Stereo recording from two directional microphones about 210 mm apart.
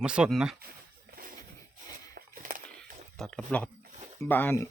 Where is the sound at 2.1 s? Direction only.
40° right (ahead or behind).